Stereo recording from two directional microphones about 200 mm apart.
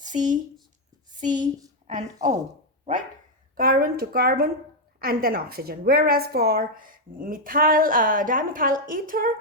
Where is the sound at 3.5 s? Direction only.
45° right (ahead or behind).